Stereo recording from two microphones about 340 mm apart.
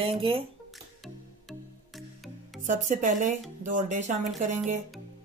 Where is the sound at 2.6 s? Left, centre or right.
Right.